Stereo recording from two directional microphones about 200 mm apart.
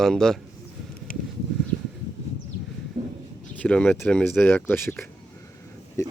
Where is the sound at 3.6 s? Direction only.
5° left (ahead or behind).